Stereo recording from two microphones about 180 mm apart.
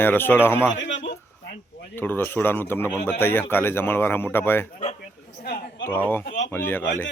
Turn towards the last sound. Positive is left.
turn(degrees=10)  # may be behind; listen again after turning